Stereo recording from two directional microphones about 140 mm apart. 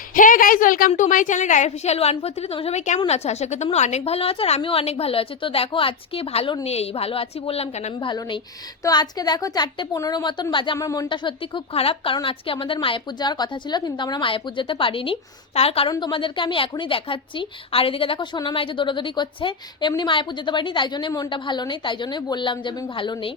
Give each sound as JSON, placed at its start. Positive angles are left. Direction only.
{"t": 0.1, "sound": "a woman's voice", "side_deg": 75}
{"t": 7.9, "sound": "a woman's voice", "side_deg": 35}
{"t": 10.8, "sound": "a woman's voice", "side_deg": 25}
{"t": 11.1, "sound": "speech", "side_deg": 35}
{"t": 15.9, "sound": "speech", "side_deg": 35}